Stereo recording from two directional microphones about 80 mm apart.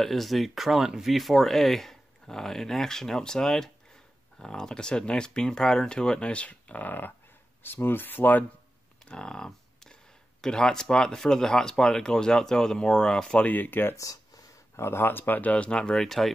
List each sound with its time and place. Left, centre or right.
0.0 s speech: centre; by 8.5 s left
9.0 s a sound: centre
10.4 s speech: centre
13.5 s speech: left
13.9 s a sound: left
14.8 s speech: left; by 16.3 s centre